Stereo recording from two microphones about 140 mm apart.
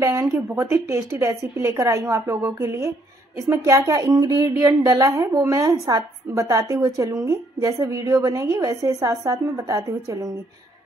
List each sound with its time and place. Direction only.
0.0 s a woman's voice: 20° right (ahead or behind)